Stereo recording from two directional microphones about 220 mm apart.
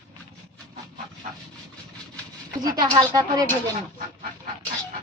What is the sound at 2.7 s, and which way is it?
Speech, 15° right (ahead or behind).